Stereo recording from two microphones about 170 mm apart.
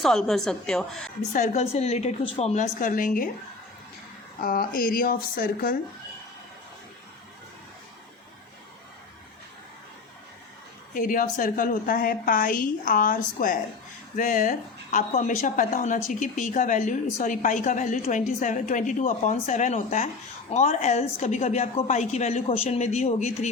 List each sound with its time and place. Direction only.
0.0 s a woman's voice: centre (ahead or behind)
1.3 s a woman's voice: 40° left (ahead or behind)
4.4 s speech: 60° left (ahead or behind)
10.9 s a woman's voice: 55° left (ahead or behind)